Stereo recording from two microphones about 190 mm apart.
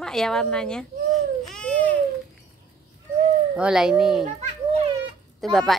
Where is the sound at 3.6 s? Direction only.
5° right (ahead or behind).